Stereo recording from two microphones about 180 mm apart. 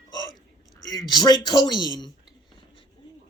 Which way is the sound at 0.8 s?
20° left (ahead or behind).